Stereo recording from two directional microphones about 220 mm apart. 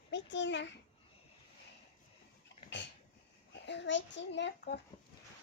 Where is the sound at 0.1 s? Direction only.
55° left (ahead or behind).